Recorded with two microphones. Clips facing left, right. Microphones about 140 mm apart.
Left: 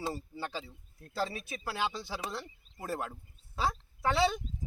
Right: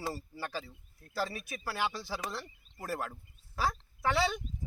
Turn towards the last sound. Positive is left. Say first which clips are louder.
# left 1 dB
turn(degrees=25)  # may be behind; listen again after turning